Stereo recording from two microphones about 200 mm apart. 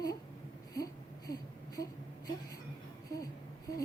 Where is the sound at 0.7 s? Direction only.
20° left (ahead or behind).